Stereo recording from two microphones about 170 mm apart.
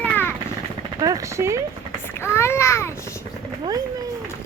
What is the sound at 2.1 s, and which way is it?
Speech, 15° left (ahead or behind).